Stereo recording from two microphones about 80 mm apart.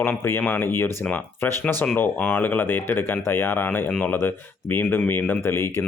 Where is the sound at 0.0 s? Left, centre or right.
Left.